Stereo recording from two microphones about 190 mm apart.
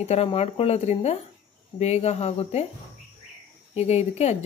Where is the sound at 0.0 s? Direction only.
35° left (ahead or behind).